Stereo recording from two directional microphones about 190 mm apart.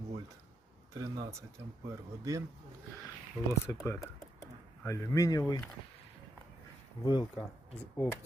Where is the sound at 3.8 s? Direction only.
15° left (ahead or behind).